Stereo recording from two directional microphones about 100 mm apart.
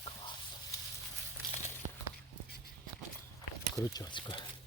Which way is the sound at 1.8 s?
90° right.